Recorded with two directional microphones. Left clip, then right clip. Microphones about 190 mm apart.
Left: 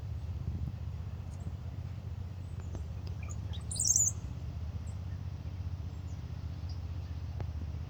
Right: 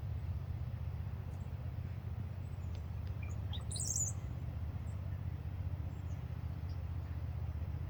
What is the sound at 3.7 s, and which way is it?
Bird, 25° right (ahead or behind).